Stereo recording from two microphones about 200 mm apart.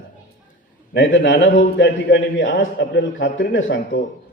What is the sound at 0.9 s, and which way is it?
A man's voice, 60° left (ahead or behind).